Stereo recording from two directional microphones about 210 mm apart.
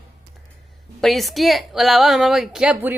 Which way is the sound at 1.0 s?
Centre (ahead or behind).